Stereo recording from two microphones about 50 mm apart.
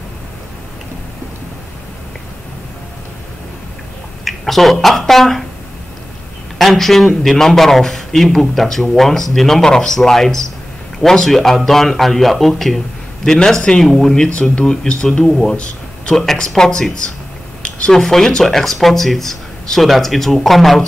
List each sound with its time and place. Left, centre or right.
4.2 s speech: centre
6.6 s a man's voice: centre
15.5 s a sound: left
16.2 s a man's voice: centre
17.6 s a sound: left
17.9 s speech: centre